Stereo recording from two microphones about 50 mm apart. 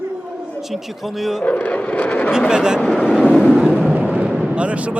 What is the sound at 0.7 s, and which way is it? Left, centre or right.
Speech, centre.